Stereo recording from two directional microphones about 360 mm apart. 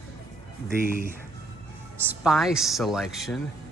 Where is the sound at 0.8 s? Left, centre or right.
Right.